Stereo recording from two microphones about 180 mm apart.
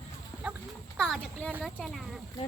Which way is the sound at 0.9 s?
Centre (ahead or behind).